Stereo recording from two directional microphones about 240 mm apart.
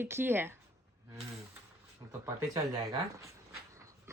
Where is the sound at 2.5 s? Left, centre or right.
Centre.